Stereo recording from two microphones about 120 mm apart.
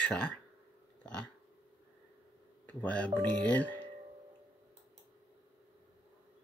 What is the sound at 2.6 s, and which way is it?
Speech, 10° left (ahead or behind).